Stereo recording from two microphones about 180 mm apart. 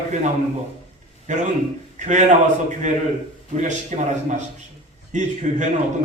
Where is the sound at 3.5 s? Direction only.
40° right (ahead or behind).